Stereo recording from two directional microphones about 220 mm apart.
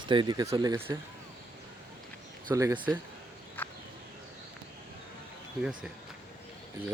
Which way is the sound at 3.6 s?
10° left (ahead or behind).